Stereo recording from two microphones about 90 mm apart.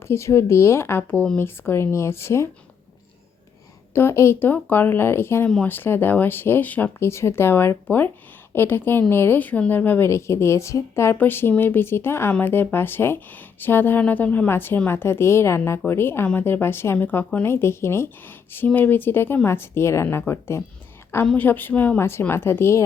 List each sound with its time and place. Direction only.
0.0 s a woman's voice: 30° left (ahead or behind)
3.9 s a woman's voice: 30° left (ahead or behind)
7.1 s a woman's voice: 30° left (ahead or behind)
10.1 s a woman's voice: 30° left (ahead or behind)